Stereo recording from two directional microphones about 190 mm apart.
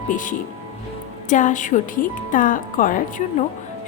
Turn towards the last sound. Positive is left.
turn(degrees=45)  # may be behind; listen again after turning